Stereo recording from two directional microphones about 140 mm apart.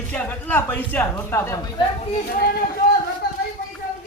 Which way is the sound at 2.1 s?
90° left.